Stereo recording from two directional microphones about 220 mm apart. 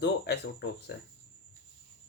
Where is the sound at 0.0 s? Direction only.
50° left (ahead or behind).